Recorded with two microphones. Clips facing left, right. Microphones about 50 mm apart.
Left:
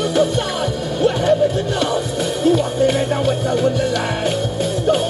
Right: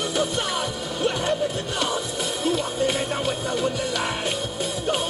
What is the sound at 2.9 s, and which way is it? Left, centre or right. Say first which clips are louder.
Music: left 7 dB; centre.